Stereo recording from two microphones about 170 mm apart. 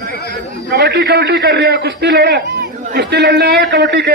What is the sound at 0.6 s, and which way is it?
A man's voice, 75° right (ahead or behind).